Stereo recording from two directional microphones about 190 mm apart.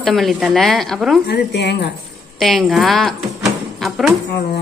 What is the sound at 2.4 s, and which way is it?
A woman's voice, centre (ahead or behind).